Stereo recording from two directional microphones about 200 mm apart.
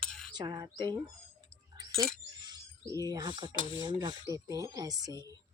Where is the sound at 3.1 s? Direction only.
20° right (ahead or behind).